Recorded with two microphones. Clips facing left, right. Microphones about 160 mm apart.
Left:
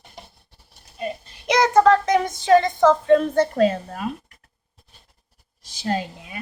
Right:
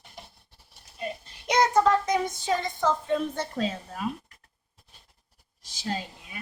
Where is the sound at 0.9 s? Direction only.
90° left; by 4.1 s 65° left (ahead or behind).